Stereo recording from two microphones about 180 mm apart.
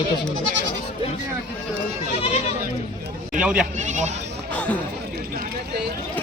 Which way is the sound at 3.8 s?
40° right (ahead or behind).